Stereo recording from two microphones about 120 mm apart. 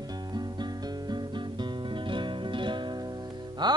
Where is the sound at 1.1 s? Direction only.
40° right (ahead or behind).